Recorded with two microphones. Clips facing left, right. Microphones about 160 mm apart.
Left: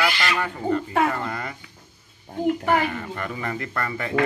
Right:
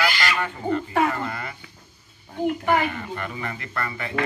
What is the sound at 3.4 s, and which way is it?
Speech, 40° left (ahead or behind).